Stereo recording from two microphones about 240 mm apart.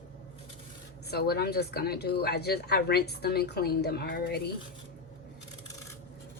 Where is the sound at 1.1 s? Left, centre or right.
Left.